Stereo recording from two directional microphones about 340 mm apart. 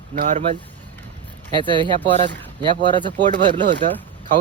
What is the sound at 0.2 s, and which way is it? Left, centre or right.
Speech, right.